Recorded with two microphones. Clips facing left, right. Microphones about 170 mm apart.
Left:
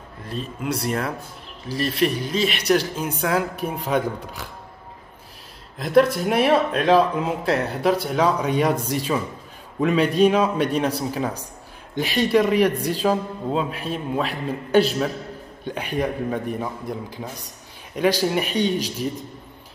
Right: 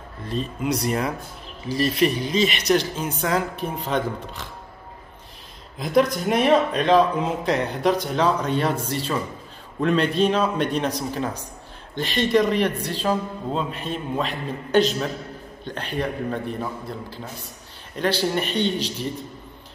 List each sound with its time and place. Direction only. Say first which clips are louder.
0.3 s a man's voice: right 2 dB; 5° left (ahead or behind)
5.8 s a man's voice: left 3 dB; centre (ahead or behind)